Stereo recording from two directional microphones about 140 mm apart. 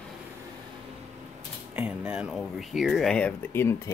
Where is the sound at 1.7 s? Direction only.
10° right (ahead or behind).